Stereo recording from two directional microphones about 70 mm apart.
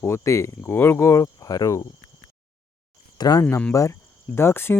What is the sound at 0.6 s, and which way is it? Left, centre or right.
Speech, left.